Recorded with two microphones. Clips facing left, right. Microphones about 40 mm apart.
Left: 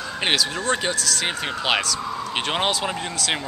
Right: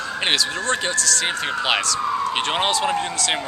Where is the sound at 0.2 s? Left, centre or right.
Centre.